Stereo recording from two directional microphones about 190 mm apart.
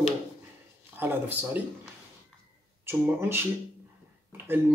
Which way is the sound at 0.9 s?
10° right (ahead or behind).